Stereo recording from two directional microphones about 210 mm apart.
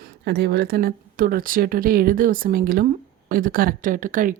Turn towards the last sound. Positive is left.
turn(degrees=-40)  # may be behind; listen again after turning